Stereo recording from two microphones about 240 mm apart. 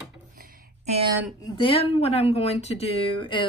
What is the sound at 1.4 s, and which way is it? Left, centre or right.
A woman's voice, left.